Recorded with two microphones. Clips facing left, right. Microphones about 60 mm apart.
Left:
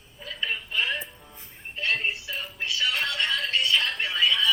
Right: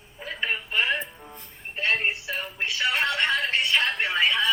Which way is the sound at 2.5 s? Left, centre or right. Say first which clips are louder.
Right 2 dB; right.